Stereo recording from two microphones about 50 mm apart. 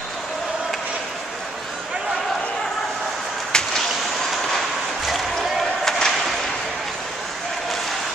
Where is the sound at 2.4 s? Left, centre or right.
Centre.